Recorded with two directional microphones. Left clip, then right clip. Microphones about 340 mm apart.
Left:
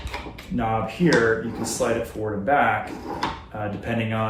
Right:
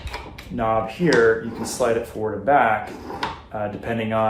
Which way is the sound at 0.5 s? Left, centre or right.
Centre.